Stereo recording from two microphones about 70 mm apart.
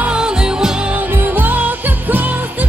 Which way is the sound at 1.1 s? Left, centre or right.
Right.